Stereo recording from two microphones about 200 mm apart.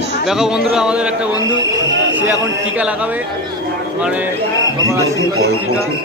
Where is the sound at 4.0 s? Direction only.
5° right (ahead or behind).